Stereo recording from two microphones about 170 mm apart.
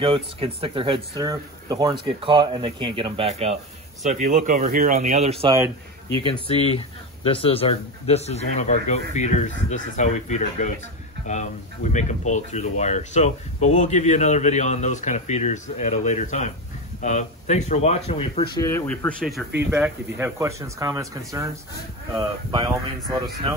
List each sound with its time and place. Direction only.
0.0 s speech: 35° right (ahead or behind)
6.2 s a man's voice: 30° left (ahead or behind)
18.6 s speech: 20° left (ahead or behind)
18.9 s speech: 5° left (ahead or behind)
20.2 s speech: 15° right (ahead or behind)
22.1 s speech: 30° right (ahead or behind)